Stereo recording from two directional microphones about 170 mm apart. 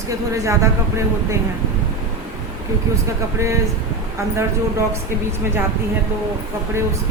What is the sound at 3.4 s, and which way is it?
Speech, 15° right (ahead or behind).